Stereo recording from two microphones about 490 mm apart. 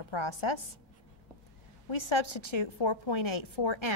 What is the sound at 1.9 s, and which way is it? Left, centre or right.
A woman's voice, left.